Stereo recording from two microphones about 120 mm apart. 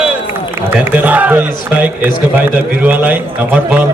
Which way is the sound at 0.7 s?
15° right (ahead or behind).